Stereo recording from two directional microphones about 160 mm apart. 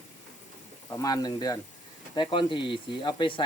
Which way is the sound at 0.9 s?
20° left (ahead or behind).